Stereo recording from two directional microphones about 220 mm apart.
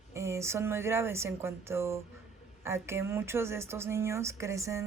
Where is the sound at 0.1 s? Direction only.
10° right (ahead or behind).